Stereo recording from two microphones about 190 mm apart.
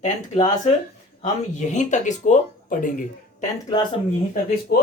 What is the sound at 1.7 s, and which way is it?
Speech, 40° left (ahead or behind).